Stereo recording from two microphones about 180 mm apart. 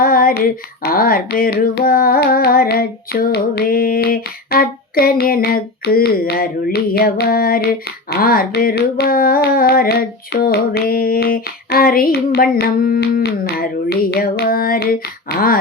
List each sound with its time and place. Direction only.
0.0 s female singing: 55° left (ahead or behind)
0.8 s music: 55° left (ahead or behind)